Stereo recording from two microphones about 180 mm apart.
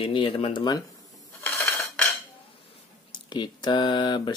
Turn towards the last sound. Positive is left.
turn(degrees=25)  # may be behind; listen again after turning